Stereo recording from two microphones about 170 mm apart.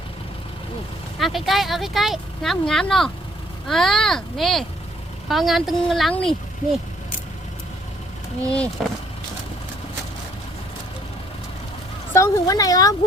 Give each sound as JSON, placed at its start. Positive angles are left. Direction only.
{"t": 1.2, "sound": "speech", "side_deg": 0}
{"t": 8.8, "sound": "speech", "side_deg": 0}
{"t": 12.1, "sound": "speech", "side_deg": 15}